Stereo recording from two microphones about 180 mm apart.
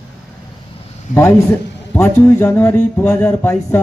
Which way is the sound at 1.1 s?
10° left (ahead or behind).